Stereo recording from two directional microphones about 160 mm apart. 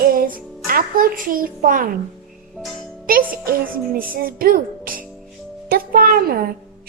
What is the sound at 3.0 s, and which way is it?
A woman's voice, 65° right (ahead or behind).